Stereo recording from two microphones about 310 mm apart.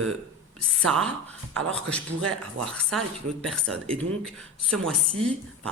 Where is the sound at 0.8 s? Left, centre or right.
Centre.